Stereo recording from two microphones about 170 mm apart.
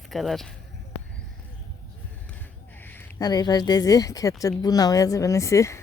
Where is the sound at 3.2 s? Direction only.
25° left (ahead or behind).